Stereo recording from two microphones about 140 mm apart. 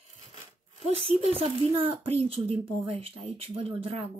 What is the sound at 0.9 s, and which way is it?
Speech, 45° right (ahead or behind).